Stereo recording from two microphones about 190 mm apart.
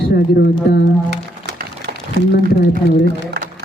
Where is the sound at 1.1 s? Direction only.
60° right (ahead or behind).